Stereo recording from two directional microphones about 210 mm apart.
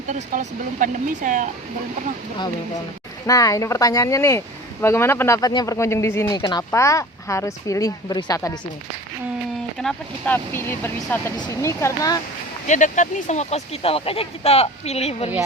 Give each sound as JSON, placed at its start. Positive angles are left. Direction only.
{"t": 0.1, "sound": "speech", "side_deg": -40}
{"t": 3.2, "sound": "speech", "side_deg": 15}
{"t": 9.7, "sound": "speech", "side_deg": 5}
{"t": 12.6, "sound": "speech", "side_deg": 35}